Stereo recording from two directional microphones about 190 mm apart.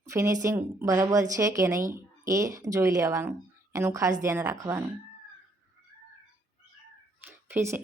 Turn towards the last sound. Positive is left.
turn(degrees=-15)  # may be behind; listen again after turning